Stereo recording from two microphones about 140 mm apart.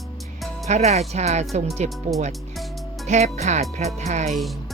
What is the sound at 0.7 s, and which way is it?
Speech, 55° right (ahead or behind).